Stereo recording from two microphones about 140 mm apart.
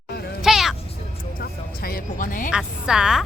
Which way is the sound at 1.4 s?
90° left.